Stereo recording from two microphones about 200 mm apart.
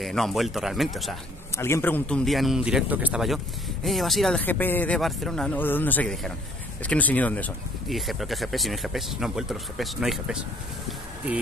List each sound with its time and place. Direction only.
0.0 s speech: centre (ahead or behind)
1.6 s speech: 10° left (ahead or behind); by 10.4 s 5° right (ahead or behind)